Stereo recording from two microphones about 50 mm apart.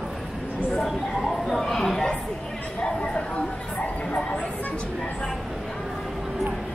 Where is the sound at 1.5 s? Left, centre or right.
Centre.